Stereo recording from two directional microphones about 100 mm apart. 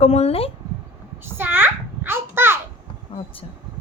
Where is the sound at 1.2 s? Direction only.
20° right (ahead or behind).